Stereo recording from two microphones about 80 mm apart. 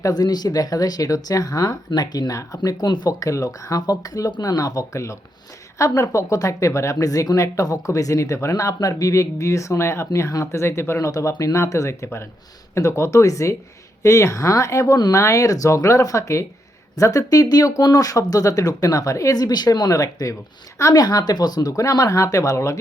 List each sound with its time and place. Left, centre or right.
0.0 s speech: left
2.6 s speech: left
3.1 s speech: left